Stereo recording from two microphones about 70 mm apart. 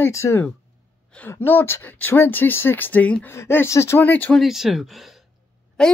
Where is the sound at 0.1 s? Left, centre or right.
Left.